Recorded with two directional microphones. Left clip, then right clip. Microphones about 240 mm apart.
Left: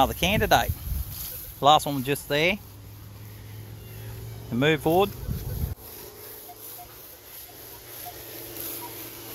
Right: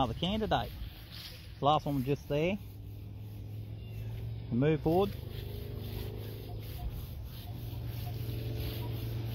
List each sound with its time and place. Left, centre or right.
0.0 s speech: left
1.2 s speech: centre
4.6 s speech: centre